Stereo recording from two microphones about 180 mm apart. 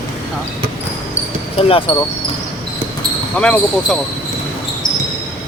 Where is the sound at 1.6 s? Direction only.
30° left (ahead or behind).